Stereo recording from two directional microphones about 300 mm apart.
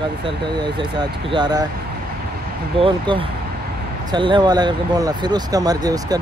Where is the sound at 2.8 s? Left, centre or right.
Centre.